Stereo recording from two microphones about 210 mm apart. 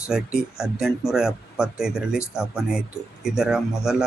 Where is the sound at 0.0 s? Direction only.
5° right (ahead or behind).